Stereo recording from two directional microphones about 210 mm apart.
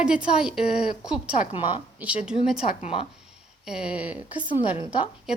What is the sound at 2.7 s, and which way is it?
Speech, 30° left (ahead or behind).